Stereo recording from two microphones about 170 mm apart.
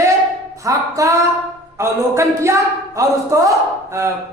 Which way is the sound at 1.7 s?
15° right (ahead or behind).